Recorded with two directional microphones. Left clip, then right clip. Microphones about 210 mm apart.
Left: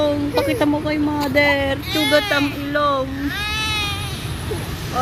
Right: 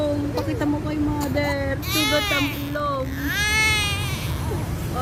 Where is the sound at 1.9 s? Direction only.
35° right (ahead or behind).